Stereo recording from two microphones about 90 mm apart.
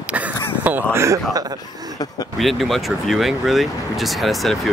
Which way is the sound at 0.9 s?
30° right (ahead or behind).